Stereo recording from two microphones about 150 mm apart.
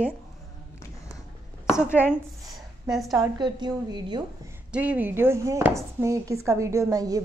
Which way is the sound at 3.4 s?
30° right (ahead or behind).